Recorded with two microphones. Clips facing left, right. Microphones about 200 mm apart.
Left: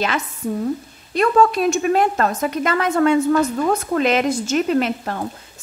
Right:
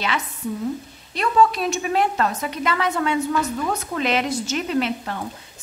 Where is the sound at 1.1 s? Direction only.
50° left (ahead or behind).